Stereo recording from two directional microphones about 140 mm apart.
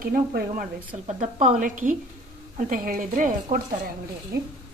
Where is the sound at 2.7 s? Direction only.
80° right.